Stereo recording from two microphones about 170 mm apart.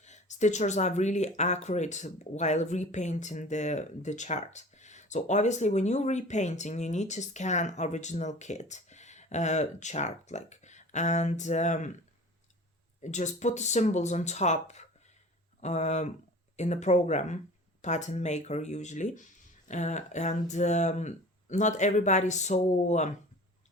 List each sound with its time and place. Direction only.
0.0 s speech: 45° left (ahead or behind)
13.0 s speech: 45° left (ahead or behind)